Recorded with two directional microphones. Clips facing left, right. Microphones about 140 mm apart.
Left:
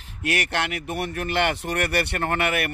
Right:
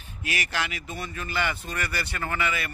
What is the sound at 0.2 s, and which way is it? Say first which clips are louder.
Speech: left 5 dB; 65° left (ahead or behind).